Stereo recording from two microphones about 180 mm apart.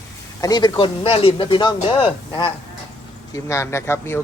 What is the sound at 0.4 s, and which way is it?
A man's voice, 20° left (ahead or behind).